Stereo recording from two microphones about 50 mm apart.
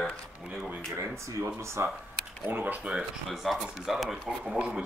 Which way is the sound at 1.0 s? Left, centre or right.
Right.